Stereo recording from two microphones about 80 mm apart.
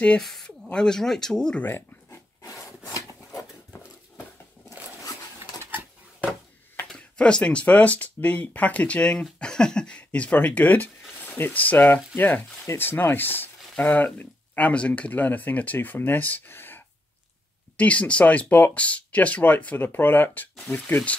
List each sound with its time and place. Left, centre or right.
0.2 s speech: centre
1.6 s dog: left
2.4 s wood: left
5.6 s a sound: right
6.9 s speech: centre
17.7 s speech: centre